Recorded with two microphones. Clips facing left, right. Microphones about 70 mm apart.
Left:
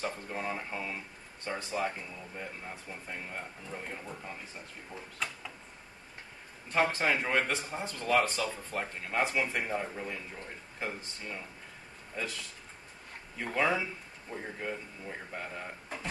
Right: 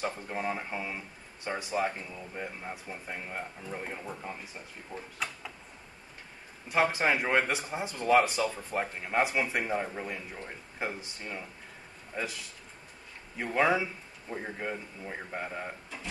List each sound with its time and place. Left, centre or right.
0.0 s speech: centre
5.2 s a sound: centre
6.9 s a man's voice: centre
13.5 s a man's voice: centre